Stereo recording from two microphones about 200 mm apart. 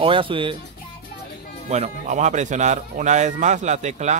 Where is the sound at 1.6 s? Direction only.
35° right (ahead or behind).